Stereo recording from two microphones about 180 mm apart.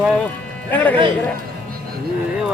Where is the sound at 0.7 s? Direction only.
10° left (ahead or behind).